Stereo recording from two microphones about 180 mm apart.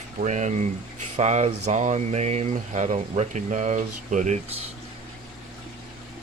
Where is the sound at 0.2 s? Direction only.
40° right (ahead or behind).